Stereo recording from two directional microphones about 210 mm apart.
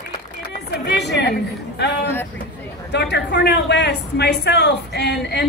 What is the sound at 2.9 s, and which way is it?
A woman's voice, 55° left (ahead or behind).